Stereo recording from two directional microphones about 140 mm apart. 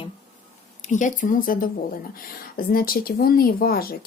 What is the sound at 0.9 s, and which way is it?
Speech, 65° left (ahead or behind).